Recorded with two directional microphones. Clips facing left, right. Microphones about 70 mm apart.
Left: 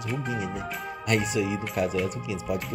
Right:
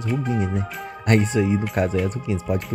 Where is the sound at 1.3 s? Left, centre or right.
Right.